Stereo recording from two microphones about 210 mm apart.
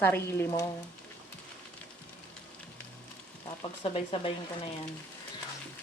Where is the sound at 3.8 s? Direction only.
25° left (ahead or behind).